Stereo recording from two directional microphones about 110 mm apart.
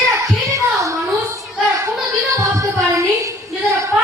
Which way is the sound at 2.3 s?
30° right (ahead or behind).